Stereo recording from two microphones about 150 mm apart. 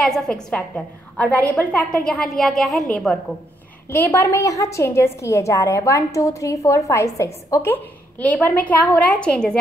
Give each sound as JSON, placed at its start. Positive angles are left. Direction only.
{"t": 0.0, "sound": "a woman's voice", "side_deg": 5}